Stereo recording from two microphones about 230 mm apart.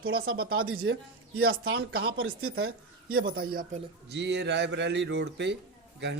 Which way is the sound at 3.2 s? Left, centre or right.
Right.